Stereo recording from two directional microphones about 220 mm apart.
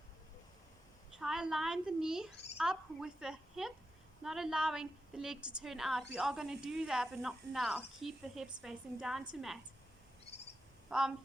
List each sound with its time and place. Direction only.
1.2 s speech: centre (ahead or behind)
10.8 s speech: 5° right (ahead or behind)